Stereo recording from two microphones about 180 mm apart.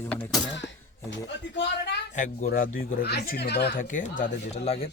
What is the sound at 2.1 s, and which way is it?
Speech, 45° left (ahead or behind).